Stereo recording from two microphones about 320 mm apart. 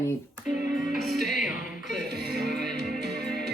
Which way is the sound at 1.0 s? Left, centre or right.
Centre.